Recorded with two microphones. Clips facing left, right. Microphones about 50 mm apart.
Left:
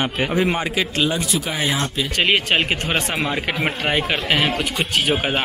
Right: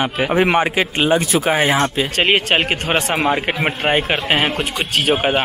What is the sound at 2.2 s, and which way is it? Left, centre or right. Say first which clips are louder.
Speech: right 2 dB; right.